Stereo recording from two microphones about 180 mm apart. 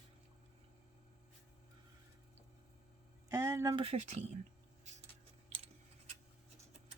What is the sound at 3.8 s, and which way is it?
Speech, 40° right (ahead or behind).